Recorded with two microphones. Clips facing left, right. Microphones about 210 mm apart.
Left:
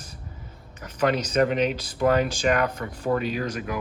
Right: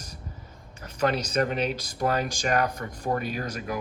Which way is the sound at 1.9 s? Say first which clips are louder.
Left 6 dB; 40° right (ahead or behind).